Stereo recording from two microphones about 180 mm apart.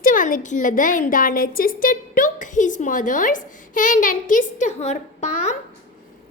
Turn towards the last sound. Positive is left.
turn(degrees=40)  # may be behind; listen again after turning